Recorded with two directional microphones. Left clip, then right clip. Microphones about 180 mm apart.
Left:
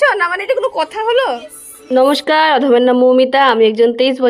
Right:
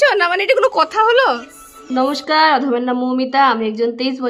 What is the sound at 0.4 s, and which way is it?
Speech, 25° right (ahead or behind).